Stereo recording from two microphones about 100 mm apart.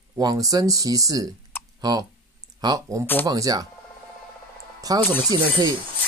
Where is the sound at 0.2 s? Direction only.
40° right (ahead or behind).